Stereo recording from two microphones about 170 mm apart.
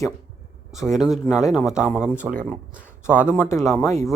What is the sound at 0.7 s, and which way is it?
A man's voice, centre (ahead or behind).